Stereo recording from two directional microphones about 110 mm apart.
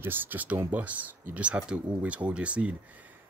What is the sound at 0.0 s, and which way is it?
Speech, 20° right (ahead or behind).